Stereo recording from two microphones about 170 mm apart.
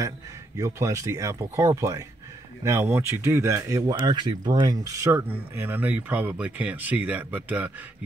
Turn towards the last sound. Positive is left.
turn(degrees=-10)  # may be behind; listen again after turning